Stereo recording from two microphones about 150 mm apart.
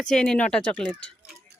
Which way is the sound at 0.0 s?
5° left (ahead or behind).